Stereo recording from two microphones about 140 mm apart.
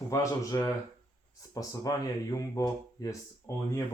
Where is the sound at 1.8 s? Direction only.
25° left (ahead or behind).